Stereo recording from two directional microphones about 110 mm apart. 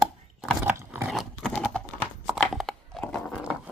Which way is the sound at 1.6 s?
10° left (ahead or behind).